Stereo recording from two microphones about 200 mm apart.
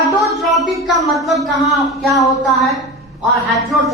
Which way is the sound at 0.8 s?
Centre (ahead or behind).